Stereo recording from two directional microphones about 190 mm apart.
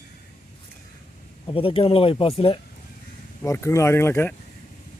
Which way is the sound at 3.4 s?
15° left (ahead or behind).